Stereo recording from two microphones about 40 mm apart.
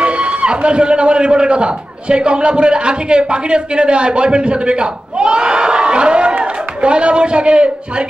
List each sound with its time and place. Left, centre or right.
0.0 s a man's voice: right